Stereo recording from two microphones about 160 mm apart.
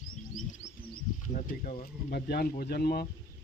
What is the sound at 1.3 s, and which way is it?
Speech, 55° left (ahead or behind).